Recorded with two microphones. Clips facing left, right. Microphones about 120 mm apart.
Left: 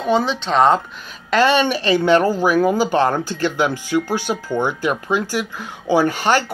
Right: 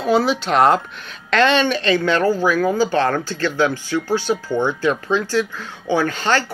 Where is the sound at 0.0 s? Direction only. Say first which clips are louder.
Right 1 dB; 5° right (ahead or behind).